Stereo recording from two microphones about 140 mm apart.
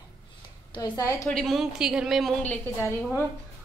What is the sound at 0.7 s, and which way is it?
Speech, 25° left (ahead or behind).